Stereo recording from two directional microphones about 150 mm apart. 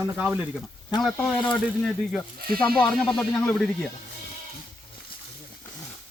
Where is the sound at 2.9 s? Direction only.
5° left (ahead or behind).